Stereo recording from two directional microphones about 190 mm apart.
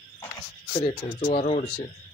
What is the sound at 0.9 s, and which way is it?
Cricket, 40° left (ahead or behind).